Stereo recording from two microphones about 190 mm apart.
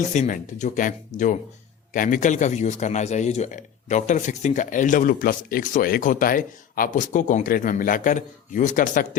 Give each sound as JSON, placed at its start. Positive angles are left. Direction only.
{"t": 0.1, "sound": "a man's voice", "side_deg": 40}